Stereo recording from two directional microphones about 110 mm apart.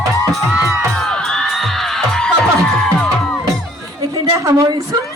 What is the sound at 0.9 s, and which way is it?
Music, 5° left (ahead or behind).